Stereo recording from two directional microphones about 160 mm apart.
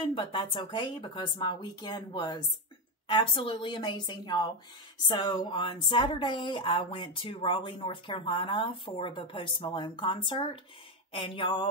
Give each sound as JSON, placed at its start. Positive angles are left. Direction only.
{"t": 0.1, "sound": "speech", "side_deg": 30}